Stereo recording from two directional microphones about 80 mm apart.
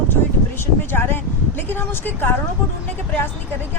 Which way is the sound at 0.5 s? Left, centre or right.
Left.